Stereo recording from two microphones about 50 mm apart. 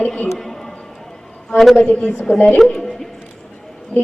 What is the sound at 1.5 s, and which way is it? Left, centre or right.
Speech, centre.